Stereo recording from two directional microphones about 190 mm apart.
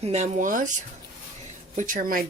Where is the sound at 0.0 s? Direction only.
35° right (ahead or behind).